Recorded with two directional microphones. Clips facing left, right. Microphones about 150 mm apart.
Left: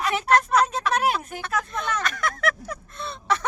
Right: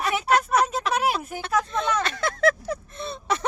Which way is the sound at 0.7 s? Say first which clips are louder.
Left 1 dB; 5° right (ahead or behind).